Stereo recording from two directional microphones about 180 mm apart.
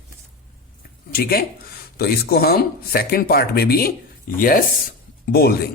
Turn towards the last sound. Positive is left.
turn(degrees=60)  # may be behind; listen again after turning